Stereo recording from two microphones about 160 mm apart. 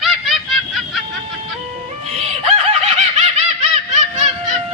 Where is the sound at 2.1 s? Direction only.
40° right (ahead or behind).